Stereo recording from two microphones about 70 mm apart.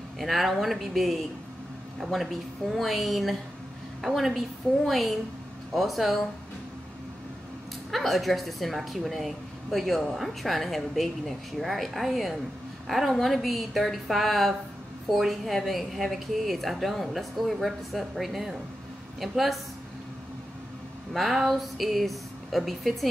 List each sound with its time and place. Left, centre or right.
0.2 s a woman's voice: centre
7.9 s a woman's voice: centre
21.1 s a woman's voice: centre